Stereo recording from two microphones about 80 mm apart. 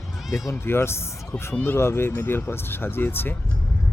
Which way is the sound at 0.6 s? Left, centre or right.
Left.